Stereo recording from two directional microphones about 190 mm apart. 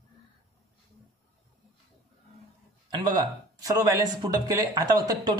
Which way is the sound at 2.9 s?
20° right (ahead or behind).